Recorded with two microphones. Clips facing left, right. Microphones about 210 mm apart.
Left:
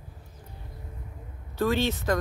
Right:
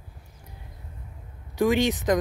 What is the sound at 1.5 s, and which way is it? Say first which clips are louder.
Speech: right 4 dB; 15° right (ahead or behind).